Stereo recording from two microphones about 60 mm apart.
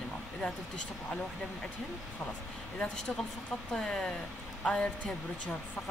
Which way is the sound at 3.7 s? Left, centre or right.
Centre.